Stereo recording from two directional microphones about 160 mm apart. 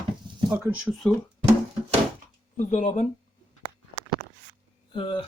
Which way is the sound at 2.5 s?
50° left (ahead or behind).